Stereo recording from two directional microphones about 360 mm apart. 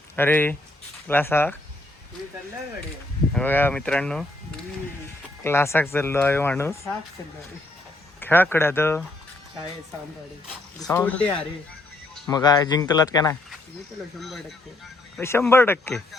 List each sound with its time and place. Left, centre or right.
0.2 s speech: centre
3.3 s speech: centre
5.4 s speech: centre
8.2 s speech: centre
10.8 s speech: centre
12.1 s music: centre
12.4 s speech: centre